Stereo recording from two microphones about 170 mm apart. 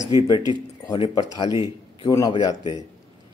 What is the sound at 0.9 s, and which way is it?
Speech, 30° left (ahead or behind).